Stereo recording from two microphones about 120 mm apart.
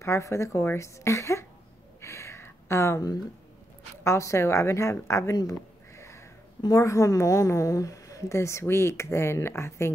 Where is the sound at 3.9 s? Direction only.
25° left (ahead or behind).